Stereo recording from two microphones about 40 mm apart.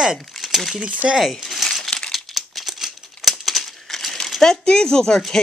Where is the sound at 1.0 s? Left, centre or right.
Centre.